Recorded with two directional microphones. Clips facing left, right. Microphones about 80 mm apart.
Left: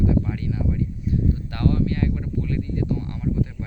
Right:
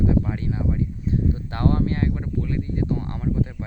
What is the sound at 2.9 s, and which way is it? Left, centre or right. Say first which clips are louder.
Speech: even; right.